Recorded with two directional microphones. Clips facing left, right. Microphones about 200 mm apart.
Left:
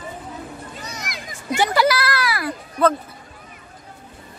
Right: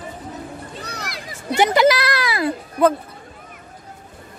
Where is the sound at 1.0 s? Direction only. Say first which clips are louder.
Even; 35° right (ahead or behind).